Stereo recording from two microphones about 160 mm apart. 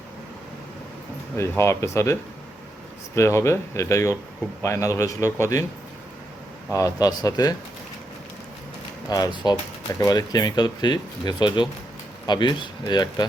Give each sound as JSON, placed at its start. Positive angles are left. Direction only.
{"t": 1.4, "sound": "speech", "side_deg": 15}
{"t": 3.2, "sound": "speech", "side_deg": 15}
{"t": 6.7, "sound": "speech", "side_deg": 20}
{"t": 9.0, "sound": "speech", "side_deg": 25}